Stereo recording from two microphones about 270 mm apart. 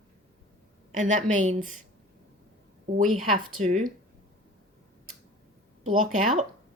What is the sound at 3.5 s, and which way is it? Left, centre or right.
Speech, right.